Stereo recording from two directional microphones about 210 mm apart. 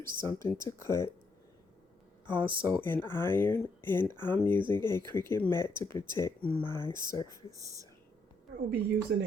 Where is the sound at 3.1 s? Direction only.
10° left (ahead or behind).